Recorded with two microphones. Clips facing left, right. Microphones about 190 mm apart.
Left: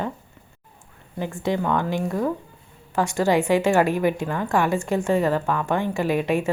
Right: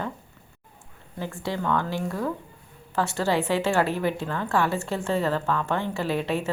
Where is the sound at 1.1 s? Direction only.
15° left (ahead or behind).